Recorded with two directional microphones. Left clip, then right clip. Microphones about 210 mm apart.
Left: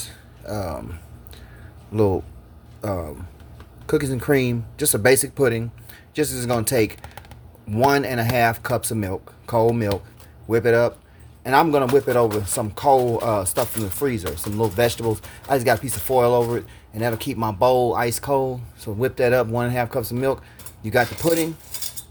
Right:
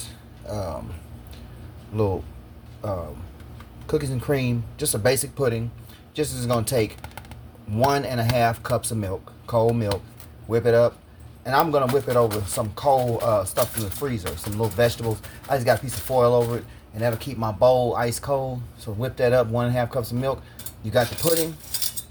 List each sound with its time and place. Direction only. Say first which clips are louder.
0.0 s keys jangling: left 2 dB; 35° left (ahead or behind)
2.8 s speech: left 2 dB; 45° left (ahead or behind)